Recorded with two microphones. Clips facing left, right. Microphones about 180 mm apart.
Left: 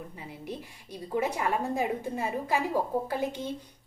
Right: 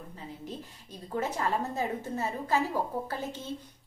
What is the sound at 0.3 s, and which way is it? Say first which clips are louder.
A woman's voice: left 2 dB; 10° left (ahead or behind).